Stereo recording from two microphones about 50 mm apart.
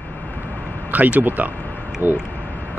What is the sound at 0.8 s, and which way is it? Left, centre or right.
Speech, right.